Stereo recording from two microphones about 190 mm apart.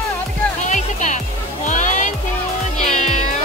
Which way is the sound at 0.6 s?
40° left (ahead or behind).